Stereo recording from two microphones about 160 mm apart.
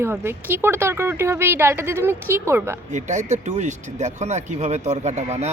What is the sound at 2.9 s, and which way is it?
Speech, 50° right (ahead or behind).